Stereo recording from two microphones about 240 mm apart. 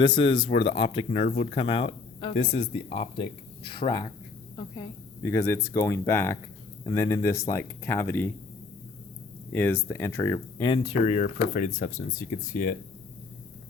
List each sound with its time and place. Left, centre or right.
0.0 s speech: centre
9.5 s speech: centre; by 12.7 s left